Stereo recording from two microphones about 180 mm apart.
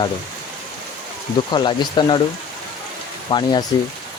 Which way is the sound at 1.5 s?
25° left (ahead or behind).